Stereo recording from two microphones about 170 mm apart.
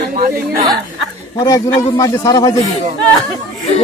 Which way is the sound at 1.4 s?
20° left (ahead or behind).